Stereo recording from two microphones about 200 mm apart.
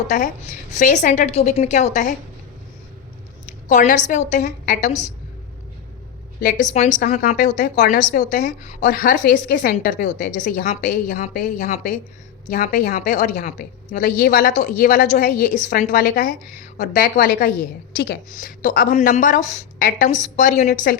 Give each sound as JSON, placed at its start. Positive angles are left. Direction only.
{"t": 0.7, "sound": "a woman's voice", "side_deg": 40}
{"t": 3.7, "sound": "a woman's voice", "side_deg": 40}
{"t": 6.4, "sound": "a woman's voice", "side_deg": 40}